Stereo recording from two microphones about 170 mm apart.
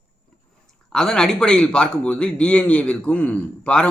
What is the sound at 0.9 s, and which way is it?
A man's voice, 5° left (ahead or behind).